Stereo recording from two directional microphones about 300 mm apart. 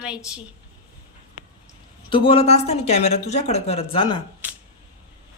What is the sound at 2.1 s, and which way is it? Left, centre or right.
Speech, centre.